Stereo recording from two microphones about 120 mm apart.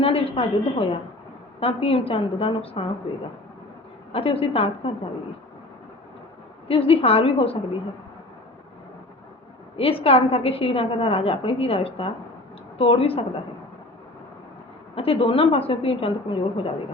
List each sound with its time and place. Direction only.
0.0 s a woman's voice: 50° left (ahead or behind)
4.1 s a woman's voice: 55° left (ahead or behind)
6.7 s a woman's voice: 55° left (ahead or behind)
9.7 s a woman's voice: 55° left (ahead or behind)
14.9 s a woman's voice: 55° left (ahead or behind)